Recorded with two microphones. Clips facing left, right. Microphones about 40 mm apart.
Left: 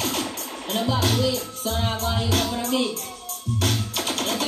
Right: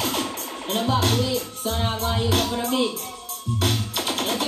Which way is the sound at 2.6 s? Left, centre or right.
Right.